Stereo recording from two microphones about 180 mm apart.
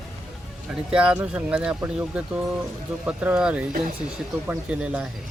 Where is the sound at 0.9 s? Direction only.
5° right (ahead or behind).